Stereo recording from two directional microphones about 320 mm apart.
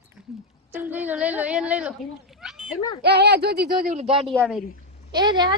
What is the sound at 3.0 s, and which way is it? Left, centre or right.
Speech, right.